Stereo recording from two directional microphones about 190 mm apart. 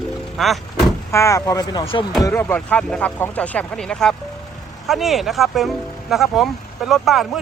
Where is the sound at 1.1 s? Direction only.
15° left (ahead or behind).